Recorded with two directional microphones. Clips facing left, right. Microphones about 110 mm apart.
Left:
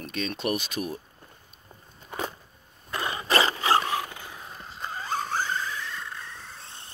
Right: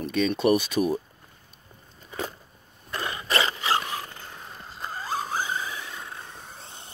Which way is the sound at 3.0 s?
25° left (ahead or behind).